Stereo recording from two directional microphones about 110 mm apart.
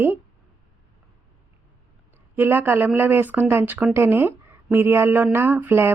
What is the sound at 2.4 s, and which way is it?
Speech, 20° right (ahead or behind).